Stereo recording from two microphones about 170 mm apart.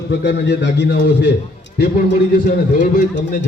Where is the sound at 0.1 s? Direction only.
90° left.